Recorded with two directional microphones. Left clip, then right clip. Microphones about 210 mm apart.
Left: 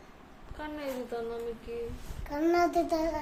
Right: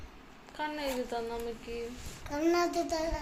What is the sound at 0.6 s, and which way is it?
Speech, centre (ahead or behind).